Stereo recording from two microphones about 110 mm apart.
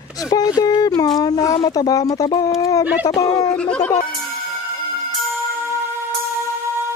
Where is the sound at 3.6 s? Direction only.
10° left (ahead or behind).